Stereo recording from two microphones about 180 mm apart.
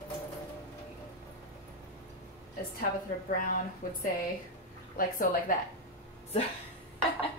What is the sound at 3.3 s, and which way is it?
A woman's voice, 50° left (ahead or behind).